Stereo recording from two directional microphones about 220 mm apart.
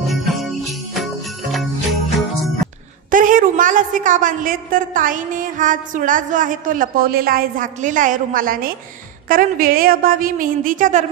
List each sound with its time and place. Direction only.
0.0 s jingle bell: centre (ahead or behind)
3.1 s a woman's voice: 35° right (ahead or behind)